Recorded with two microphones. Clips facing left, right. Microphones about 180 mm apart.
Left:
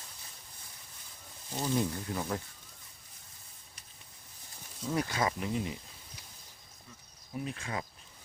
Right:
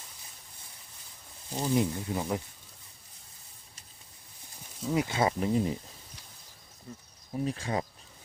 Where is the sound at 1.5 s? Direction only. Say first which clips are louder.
Right 4 dB; 15° right (ahead or behind).